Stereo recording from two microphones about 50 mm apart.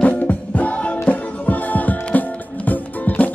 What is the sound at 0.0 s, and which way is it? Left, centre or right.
Music, left.